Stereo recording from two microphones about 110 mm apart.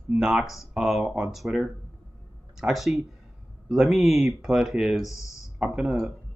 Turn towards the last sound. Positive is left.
turn(degrees=-5)  # may be behind; listen again after turning